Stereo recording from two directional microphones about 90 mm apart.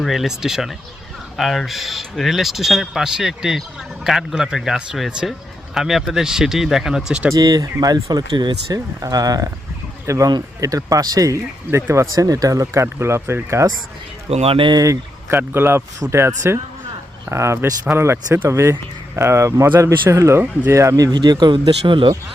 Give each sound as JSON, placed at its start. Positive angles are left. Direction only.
{"t": 0.0, "sound": "speech", "side_deg": 0}
{"t": 7.3, "sound": "speech", "side_deg": -40}
{"t": 9.0, "sound": "speech", "side_deg": -40}
{"t": 14.4, "sound": "speech", "side_deg": -90}
{"t": 14.7, "sound": "speech", "side_deg": -45}
{"t": 15.3, "sound": "speech", "side_deg": -25}
{"t": 21.2, "sound": "speech", "side_deg": -50}
{"t": 21.8, "sound": "speech", "side_deg": -65}